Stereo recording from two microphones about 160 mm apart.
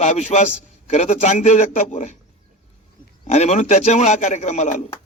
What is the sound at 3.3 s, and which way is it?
A man's voice, 45° left (ahead or behind).